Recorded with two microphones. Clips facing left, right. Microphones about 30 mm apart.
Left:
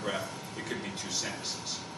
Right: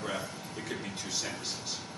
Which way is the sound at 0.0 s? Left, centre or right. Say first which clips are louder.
Left 2 dB; centre.